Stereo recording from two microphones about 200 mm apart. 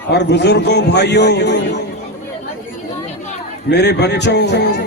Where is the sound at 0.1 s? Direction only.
60° left (ahead or behind).